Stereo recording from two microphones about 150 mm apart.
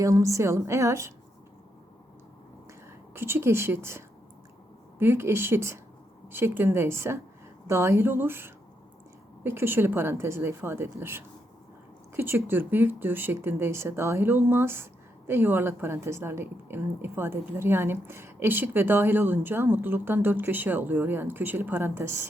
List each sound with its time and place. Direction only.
0.0 s a woman's voice: 20° right (ahead or behind)
3.2 s a woman's voice: 15° right (ahead or behind)